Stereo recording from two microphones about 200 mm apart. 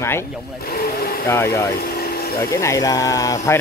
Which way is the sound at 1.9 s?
50° left (ahead or behind).